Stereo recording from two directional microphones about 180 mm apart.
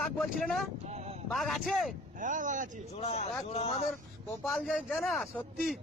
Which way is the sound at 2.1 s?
45° right (ahead or behind).